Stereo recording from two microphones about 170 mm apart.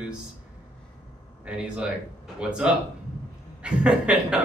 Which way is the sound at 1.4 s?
5° right (ahead or behind).